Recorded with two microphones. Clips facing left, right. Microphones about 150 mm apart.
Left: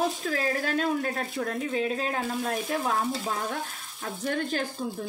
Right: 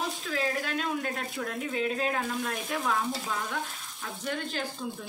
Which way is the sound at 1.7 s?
35° left (ahead or behind).